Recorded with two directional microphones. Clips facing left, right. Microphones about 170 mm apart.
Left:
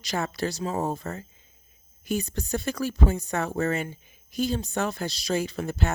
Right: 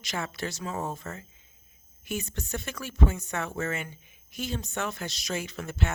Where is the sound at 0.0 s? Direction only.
35° left (ahead or behind).